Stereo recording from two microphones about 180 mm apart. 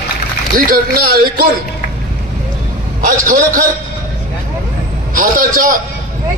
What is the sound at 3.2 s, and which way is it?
Speech, 50° right (ahead or behind).